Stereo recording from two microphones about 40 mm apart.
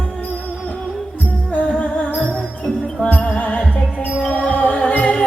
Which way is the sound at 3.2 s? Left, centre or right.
Left.